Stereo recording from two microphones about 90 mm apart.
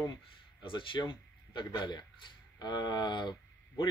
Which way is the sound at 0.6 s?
65° left (ahead or behind).